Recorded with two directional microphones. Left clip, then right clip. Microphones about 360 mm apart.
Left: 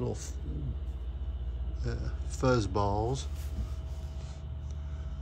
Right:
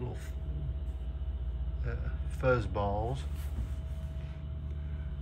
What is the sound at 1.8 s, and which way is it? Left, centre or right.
Speech, centre.